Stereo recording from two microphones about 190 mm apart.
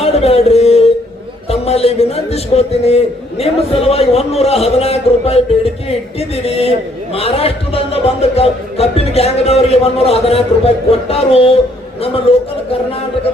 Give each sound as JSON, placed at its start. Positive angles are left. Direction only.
{"t": 0.0, "sound": "music", "side_deg": 35}
{"t": 1.5, "sound": "a man's voice", "side_deg": 30}